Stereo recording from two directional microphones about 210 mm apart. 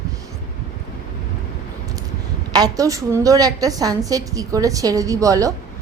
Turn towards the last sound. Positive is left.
turn(degrees=-15)  # may be behind; listen again after turning